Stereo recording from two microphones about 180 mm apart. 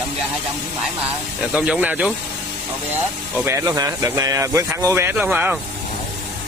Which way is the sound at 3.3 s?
15° right (ahead or behind).